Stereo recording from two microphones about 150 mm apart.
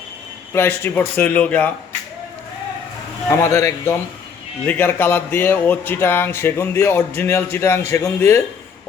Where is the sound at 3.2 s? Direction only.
15° left (ahead or behind).